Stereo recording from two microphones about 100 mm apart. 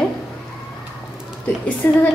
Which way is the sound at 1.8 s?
15° left (ahead or behind).